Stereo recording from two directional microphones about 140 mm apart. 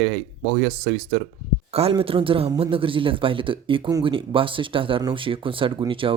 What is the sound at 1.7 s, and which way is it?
Speech, 45° right (ahead or behind).